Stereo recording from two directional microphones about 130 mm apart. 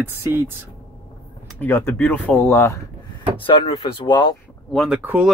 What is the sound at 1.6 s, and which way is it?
Speech, 20° left (ahead or behind).